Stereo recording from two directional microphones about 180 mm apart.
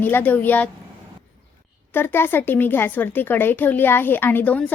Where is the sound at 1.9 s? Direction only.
10° left (ahead or behind).